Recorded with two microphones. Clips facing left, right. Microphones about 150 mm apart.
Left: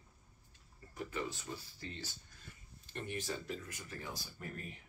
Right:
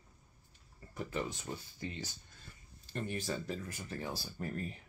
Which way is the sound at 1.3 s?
15° right (ahead or behind).